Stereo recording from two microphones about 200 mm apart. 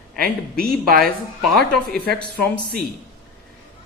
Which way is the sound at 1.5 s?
Centre (ahead or behind).